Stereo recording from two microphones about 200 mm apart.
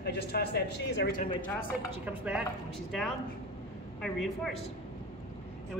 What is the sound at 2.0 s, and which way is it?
A woman's voice, 5° right (ahead or behind).